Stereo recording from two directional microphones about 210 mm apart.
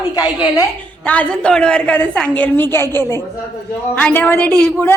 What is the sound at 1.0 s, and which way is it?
A woman's voice, 5° left (ahead or behind).